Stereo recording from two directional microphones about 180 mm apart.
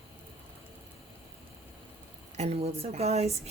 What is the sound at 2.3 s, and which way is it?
Speech, 35° right (ahead or behind).